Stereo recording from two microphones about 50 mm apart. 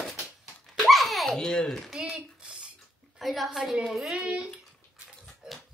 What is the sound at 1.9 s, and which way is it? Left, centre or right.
Speech, centre.